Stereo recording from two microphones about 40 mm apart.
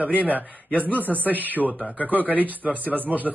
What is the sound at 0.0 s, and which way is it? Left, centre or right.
A man's voice, right.